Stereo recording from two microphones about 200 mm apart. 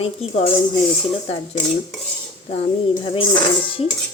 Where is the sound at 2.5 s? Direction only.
35° left (ahead or behind).